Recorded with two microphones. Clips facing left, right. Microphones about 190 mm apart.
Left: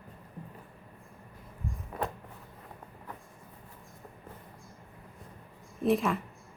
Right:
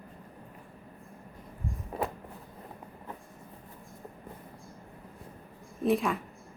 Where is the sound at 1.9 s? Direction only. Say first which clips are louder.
Right 2 dB; 30° right (ahead or behind).